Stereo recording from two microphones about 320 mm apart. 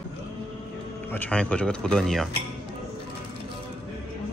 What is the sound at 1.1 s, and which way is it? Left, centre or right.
Speech, centre.